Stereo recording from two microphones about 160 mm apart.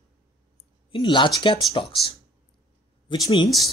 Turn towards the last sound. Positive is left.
turn(degrees=30)  # may be behind; listen again after turning